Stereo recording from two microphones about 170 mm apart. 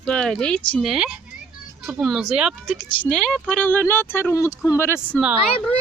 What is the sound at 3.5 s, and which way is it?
Speech, 10° left (ahead or behind).